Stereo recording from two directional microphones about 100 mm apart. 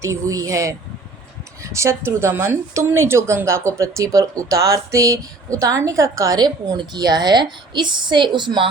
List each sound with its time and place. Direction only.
0.0 s a woman's voice: 30° right (ahead or behind); by 8.6 s 50° right (ahead or behind)